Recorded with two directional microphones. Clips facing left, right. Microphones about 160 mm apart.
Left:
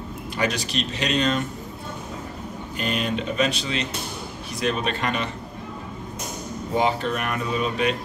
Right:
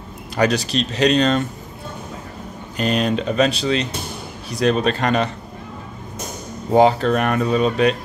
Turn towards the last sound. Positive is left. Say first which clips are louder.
# right 7 dB
turn(degrees=-35)  # may be behind; listen again after turning